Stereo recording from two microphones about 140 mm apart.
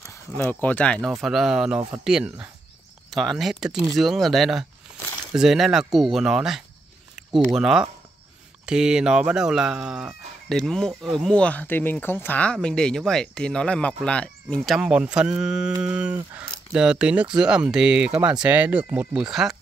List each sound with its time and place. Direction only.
0.4 s speech: 10° left (ahead or behind)
1.2 s speech: centre (ahead or behind)
14.6 s speech: 5° right (ahead or behind)